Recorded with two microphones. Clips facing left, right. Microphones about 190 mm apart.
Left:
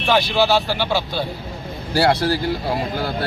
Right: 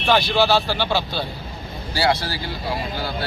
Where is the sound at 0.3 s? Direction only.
15° left (ahead or behind).